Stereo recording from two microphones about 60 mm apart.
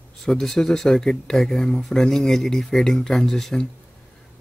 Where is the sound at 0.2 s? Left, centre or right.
Centre.